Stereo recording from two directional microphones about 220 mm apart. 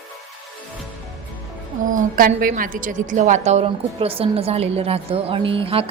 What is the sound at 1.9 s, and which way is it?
A woman's voice, 40° right (ahead or behind).